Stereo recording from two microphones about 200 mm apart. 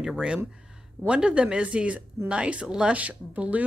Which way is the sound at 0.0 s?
5° right (ahead or behind).